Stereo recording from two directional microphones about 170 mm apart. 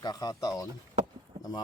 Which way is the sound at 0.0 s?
20° left (ahead or behind).